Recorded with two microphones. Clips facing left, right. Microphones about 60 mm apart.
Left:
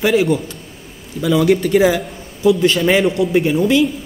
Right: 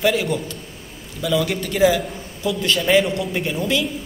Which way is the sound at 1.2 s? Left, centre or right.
Left.